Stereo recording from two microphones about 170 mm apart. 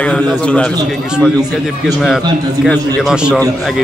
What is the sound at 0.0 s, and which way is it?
Speech, 5° left (ahead or behind).